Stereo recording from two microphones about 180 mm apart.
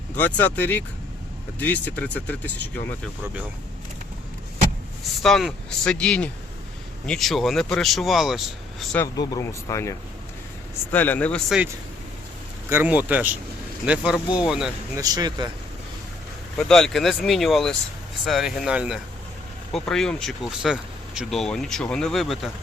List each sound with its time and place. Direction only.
0.2 s speech: 10° left (ahead or behind)
5.2 s speech: centre (ahead or behind)
9.0 s speech: 20° left (ahead or behind); by 14.7 s 5° right (ahead or behind)
14.9 s speech: 20° right (ahead or behind)
16.6 s speech: 5° left (ahead or behind)